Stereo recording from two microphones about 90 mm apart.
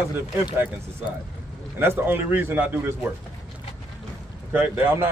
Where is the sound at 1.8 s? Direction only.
25° right (ahead or behind).